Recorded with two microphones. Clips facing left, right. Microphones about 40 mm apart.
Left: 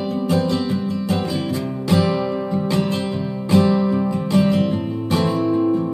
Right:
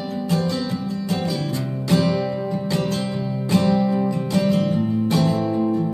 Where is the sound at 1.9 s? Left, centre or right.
Centre.